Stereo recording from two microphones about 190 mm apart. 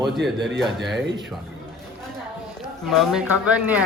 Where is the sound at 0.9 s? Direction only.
70° right (ahead or behind).